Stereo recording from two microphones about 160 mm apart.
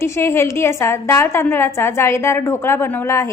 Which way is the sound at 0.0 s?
15° left (ahead or behind).